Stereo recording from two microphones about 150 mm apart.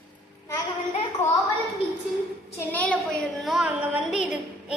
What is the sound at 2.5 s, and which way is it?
A child's voice, 10° left (ahead or behind).